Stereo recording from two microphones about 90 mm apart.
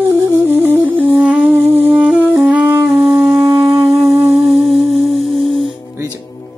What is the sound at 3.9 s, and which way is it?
Music, 90° right.